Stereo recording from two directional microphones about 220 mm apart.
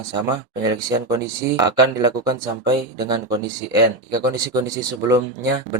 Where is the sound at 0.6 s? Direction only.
15° right (ahead or behind).